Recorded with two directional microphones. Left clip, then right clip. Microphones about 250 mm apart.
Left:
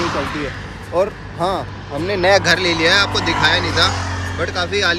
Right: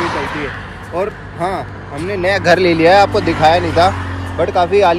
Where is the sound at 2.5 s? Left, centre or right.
Centre.